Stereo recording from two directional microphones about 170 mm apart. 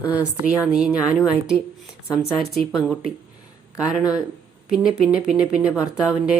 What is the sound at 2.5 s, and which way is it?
Speech, centre (ahead or behind).